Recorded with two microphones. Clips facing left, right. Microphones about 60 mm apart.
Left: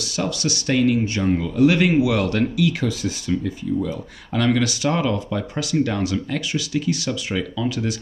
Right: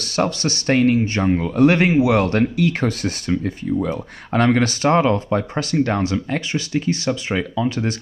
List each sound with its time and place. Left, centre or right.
0.0 s speech: right
1.9 s speech: right